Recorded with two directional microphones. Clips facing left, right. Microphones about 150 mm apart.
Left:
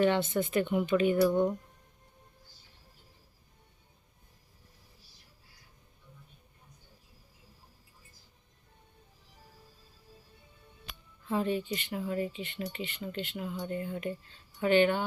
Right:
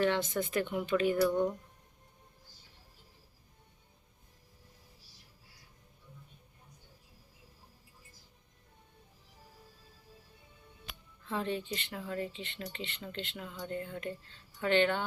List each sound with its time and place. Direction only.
0.3 s a woman's voice: 5° left (ahead or behind)
1.2 s speech: 20° left (ahead or behind)
11.3 s speech: 15° left (ahead or behind)